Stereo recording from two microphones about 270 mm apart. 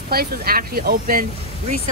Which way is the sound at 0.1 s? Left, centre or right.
Right.